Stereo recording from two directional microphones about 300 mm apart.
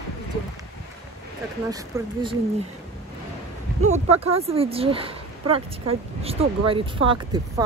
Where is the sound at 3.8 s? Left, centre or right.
Right.